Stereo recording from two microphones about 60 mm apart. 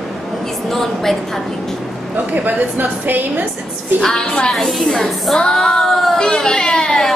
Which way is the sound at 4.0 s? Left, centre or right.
Centre.